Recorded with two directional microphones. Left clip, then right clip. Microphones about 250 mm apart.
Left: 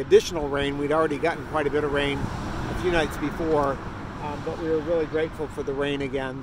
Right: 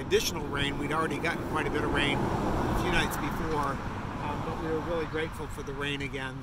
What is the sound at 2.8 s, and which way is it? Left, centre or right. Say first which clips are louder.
Speech: left 5 dB; centre.